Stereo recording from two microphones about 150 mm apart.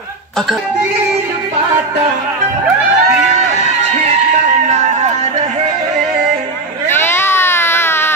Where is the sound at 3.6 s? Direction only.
45° right (ahead or behind).